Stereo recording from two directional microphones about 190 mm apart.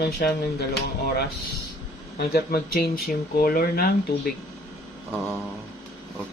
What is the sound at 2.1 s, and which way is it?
Speech, 55° left (ahead or behind).